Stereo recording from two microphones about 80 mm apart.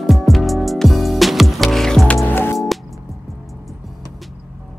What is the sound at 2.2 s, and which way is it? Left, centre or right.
Music, left.